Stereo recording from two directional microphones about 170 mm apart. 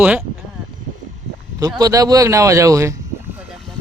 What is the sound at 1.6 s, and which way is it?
Speech, 20° right (ahead or behind).